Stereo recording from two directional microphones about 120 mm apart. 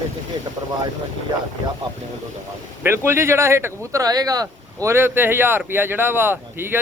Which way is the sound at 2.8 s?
20° right (ahead or behind).